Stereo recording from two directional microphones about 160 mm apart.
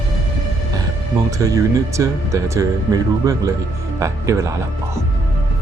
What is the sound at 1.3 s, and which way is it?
Speech, 20° right (ahead or behind).